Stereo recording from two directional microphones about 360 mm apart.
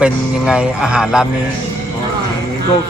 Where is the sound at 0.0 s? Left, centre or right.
Centre.